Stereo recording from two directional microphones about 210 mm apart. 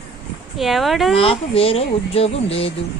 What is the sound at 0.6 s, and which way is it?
Speech, centre (ahead or behind).